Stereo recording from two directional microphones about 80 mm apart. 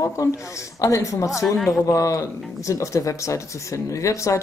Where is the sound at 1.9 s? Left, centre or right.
Left.